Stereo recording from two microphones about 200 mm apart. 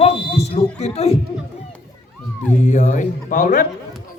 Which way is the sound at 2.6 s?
40° left (ahead or behind).